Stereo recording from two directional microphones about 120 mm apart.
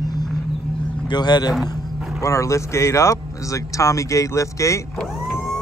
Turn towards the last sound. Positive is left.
turn(degrees=25)  # may be behind; listen again after turning